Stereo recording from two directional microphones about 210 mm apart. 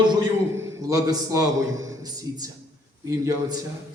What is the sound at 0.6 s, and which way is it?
A man's voice, 15° right (ahead or behind).